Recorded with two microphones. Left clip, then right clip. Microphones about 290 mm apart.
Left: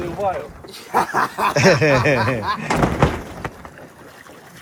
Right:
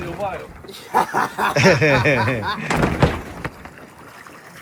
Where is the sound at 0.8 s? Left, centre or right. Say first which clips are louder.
Even; centre.